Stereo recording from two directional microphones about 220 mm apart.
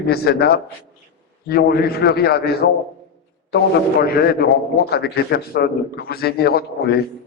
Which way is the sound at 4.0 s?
45° left (ahead or behind).